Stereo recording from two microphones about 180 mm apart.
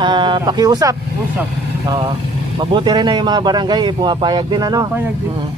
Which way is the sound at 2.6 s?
25° right (ahead or behind).